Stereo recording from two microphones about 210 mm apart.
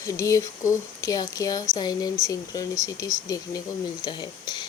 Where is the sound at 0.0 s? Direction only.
15° left (ahead or behind).